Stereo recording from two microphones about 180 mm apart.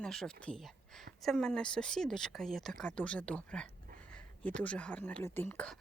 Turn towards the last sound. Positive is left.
turn(degrees=5)  # may be behind; listen again after turning